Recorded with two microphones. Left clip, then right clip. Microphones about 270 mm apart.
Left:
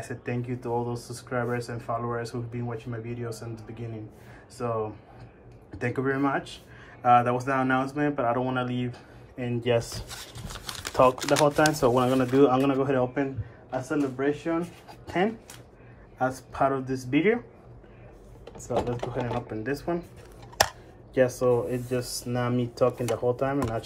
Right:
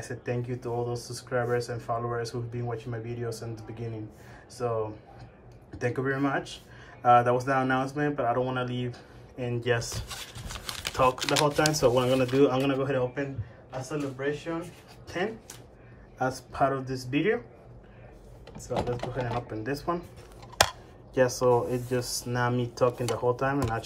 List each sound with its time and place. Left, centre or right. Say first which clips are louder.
0.0 s speech: even; centre
4.6 s speech: even; centre
10.5 s typing: even; centre
10.9 s speech: left 4 dB; centre
16.2 s speech: left 1 dB; centre
18.5 s speech: left 2 dB; left
19.5 s speech: left 1 dB; centre
21.5 s speech: even; centre